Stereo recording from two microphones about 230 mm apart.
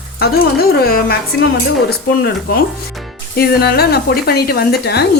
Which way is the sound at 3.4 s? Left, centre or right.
Left.